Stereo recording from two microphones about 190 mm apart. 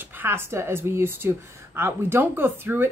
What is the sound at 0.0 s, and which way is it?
Speech, 10° right (ahead or behind).